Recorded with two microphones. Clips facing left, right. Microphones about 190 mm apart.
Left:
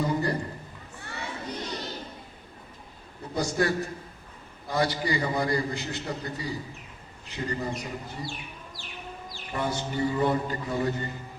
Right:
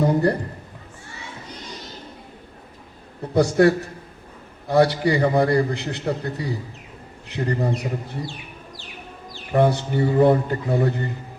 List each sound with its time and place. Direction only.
0.0 s a sound: 60° right (ahead or behind)
3.3 s a man's voice: 65° right (ahead or behind)
8.3 s chicken: 20° right (ahead or behind)
9.5 s a man's voice: 60° right (ahead or behind)